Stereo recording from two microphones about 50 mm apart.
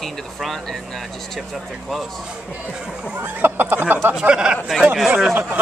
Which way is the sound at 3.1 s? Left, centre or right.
Right.